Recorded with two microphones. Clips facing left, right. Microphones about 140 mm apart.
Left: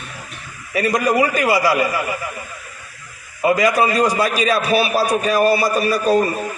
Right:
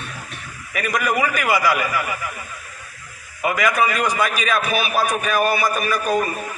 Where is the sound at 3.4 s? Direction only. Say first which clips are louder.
Left 4 dB; 35° left (ahead or behind).